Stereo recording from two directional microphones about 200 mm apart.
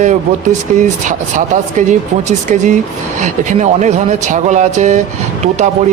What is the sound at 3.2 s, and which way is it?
Speech, 35° right (ahead or behind).